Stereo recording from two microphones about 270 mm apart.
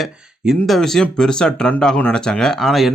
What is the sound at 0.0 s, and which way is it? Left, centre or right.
Speech, centre.